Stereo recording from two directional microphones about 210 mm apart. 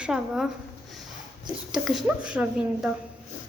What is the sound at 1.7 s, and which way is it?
A woman's voice, 5° right (ahead or behind).